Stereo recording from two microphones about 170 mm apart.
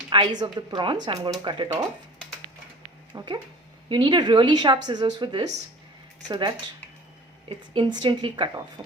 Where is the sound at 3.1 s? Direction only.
25° right (ahead or behind).